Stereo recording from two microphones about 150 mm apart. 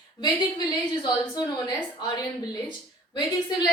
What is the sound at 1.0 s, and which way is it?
A woman's voice, 25° left (ahead or behind).